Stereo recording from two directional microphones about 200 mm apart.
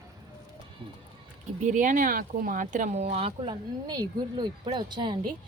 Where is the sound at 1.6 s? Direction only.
40° right (ahead or behind); by 5.2 s 20° right (ahead or behind).